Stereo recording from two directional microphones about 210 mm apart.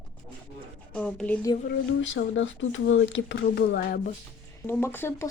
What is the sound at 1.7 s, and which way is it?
Speech, 65° left (ahead or behind).